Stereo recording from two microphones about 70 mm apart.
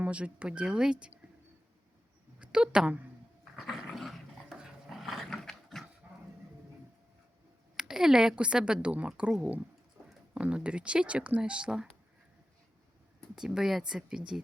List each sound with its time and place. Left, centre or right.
0.0 s a woman's voice: centre
2.4 s a woman's voice: centre
3.7 s dog: centre
6.0 s dog: right
7.8 s a woman's voice: centre
10.3 s a woman's voice: centre
13.3 s a woman's voice: centre